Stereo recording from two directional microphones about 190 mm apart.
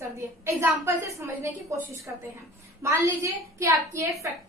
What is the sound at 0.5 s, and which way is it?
A woman's voice, 15° right (ahead or behind).